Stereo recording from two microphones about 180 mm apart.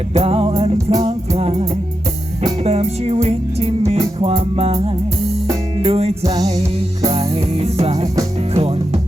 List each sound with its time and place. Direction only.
0.1 s music: 35° right (ahead or behind)